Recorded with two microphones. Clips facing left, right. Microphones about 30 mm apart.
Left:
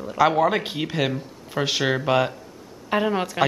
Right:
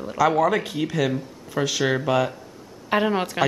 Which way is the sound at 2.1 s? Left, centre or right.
Left.